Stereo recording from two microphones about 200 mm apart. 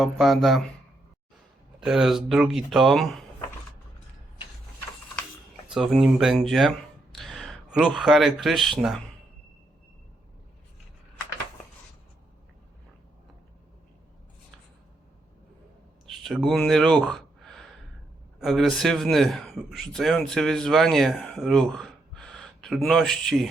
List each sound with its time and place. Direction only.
0.0 s a man's voice: centre (ahead or behind)
1.8 s a man's voice: centre (ahead or behind)
5.6 s a man's voice: centre (ahead or behind)
16.0 s a sound: centre (ahead or behind)
16.6 s a man's voice: centre (ahead or behind)